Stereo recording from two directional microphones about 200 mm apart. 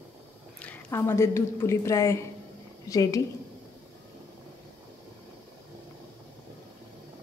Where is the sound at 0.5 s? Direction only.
10° left (ahead or behind).